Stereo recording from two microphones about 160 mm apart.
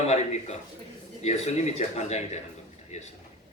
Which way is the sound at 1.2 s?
45° left (ahead or behind).